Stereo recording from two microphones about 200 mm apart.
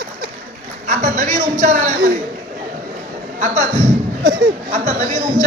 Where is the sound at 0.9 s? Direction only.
40° right (ahead or behind).